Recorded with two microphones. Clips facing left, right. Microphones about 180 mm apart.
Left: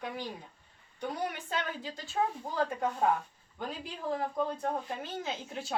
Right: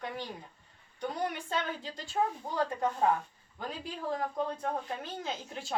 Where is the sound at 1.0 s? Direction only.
5° left (ahead or behind).